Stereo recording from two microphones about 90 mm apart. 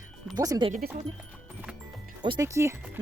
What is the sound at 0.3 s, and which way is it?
Speech, 40° right (ahead or behind).